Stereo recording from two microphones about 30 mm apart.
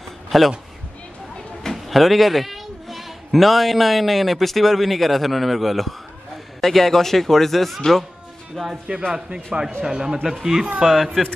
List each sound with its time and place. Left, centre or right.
0.3 s speech: centre
1.7 s speech: centre
8.6 s speech: left
9.1 s a man's voice: right
10.2 s speech: centre
10.8 s speech: centre